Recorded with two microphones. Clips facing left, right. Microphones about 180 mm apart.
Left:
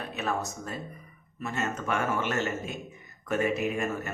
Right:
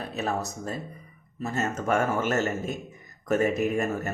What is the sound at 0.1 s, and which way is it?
A man's voice, 35° right (ahead or behind).